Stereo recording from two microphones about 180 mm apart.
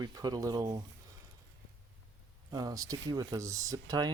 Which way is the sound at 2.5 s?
20° right (ahead or behind).